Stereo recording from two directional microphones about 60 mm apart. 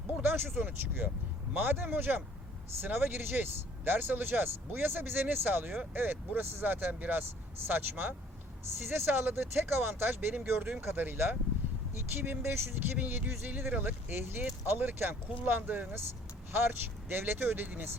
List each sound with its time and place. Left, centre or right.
0.2 s speech: right
13.0 s speech: right